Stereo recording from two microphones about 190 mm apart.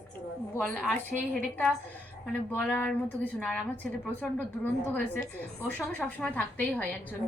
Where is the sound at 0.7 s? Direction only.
10° left (ahead or behind).